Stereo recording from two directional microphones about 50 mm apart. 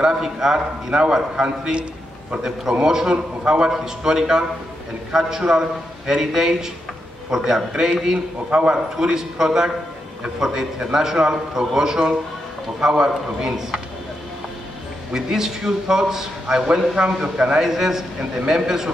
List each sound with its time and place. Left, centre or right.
0.0 s a man's voice: centre
8.5 s a man's voice: right
8.9 s a man's voice: centre
15.1 s a man's voice: centre